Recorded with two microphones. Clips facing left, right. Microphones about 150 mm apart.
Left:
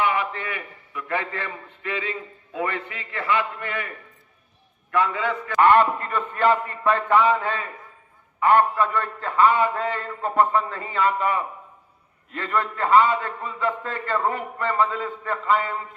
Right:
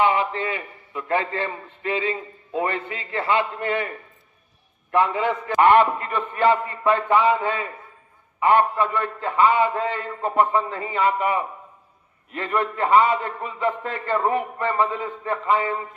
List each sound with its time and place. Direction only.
0.1 s a man's voice: 25° right (ahead or behind)
6.1 s a man's voice: 15° right (ahead or behind)